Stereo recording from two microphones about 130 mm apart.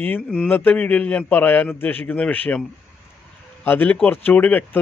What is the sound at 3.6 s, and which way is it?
Speech, 15° left (ahead or behind).